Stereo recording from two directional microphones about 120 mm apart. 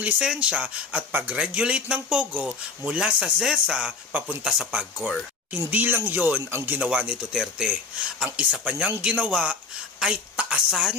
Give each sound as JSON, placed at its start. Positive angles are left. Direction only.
{"t": 0.0, "sound": "a woman's voice", "side_deg": -10}